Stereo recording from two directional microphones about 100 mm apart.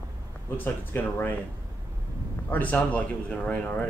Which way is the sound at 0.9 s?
20° left (ahead or behind).